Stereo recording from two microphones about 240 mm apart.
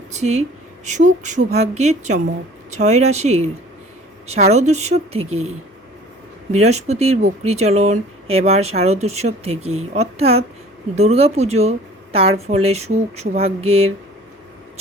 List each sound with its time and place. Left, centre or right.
0.1 s speech: right
6.5 s speech: right